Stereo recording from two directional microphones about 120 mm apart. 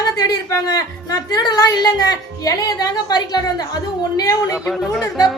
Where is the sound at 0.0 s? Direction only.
30° left (ahead or behind).